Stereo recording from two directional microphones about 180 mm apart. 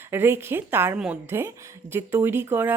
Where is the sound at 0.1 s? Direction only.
10° right (ahead or behind).